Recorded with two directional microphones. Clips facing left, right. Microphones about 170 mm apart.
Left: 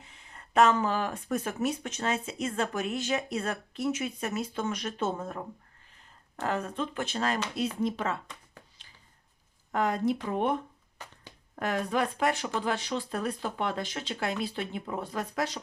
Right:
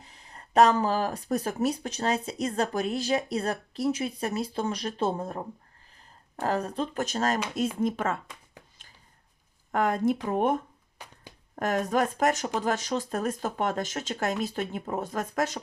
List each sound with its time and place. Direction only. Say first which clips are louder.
0.0 s speech: right 2 dB; 35° right (ahead or behind)
9.7 s speech: right 2 dB; 50° right (ahead or behind)
10.9 s finger snapping: even; 10° right (ahead or behind)
11.5 s speech: right 3 dB; 45° right (ahead or behind)